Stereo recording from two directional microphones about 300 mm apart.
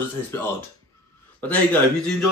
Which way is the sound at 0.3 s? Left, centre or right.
Centre.